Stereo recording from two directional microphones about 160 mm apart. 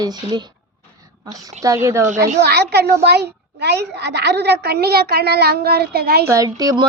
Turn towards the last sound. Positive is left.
turn(degrees=-25)  # may be behind; listen again after turning